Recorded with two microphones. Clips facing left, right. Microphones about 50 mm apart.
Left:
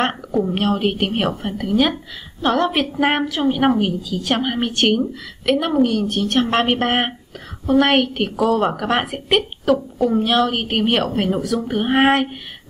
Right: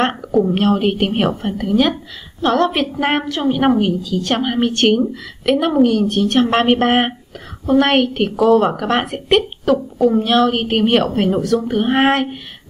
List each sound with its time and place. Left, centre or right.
0.0 s a woman's voice: centre